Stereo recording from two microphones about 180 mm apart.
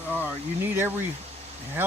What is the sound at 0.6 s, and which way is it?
Speech, 10° right (ahead or behind).